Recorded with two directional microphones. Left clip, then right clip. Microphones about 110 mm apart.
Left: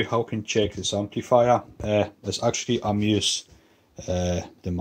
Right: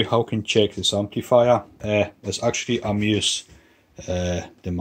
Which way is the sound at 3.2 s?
35° left (ahead or behind).